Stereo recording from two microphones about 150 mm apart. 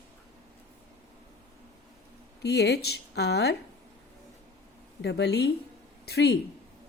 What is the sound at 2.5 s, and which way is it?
Speech, 90° left.